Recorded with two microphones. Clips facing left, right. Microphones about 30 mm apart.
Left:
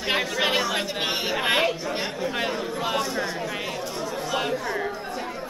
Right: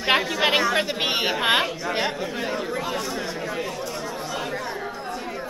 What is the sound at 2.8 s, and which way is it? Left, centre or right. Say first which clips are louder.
Speech: left 2 dB; centre.